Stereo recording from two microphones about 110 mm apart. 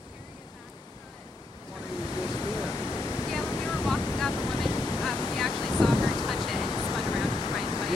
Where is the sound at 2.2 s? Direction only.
30° left (ahead or behind).